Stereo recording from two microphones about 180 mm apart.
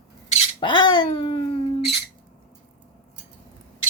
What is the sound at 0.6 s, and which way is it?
Speech, 25° left (ahead or behind).